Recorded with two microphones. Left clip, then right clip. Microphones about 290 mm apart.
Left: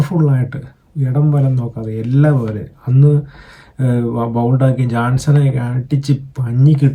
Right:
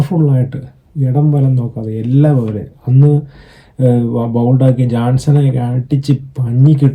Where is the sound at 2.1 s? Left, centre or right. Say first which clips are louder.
Right 2 dB; left.